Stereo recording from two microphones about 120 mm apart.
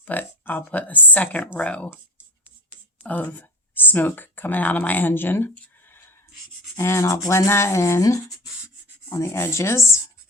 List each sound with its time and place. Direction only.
0.0 s speech: 15° left (ahead or behind)
3.0 s speech: 15° left (ahead or behind)
6.7 s a sound: 25° left (ahead or behind)